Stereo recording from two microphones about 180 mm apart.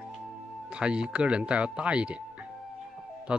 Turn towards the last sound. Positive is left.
turn(degrees=-5)  # may be behind; listen again after turning